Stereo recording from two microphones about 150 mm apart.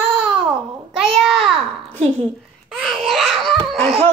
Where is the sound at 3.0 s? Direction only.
Centre (ahead or behind).